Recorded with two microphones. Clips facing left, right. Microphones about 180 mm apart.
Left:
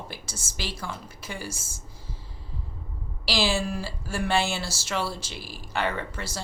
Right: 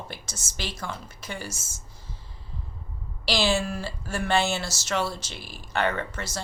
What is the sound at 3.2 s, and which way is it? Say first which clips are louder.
Speech: right 1 dB; 10° left (ahead or behind).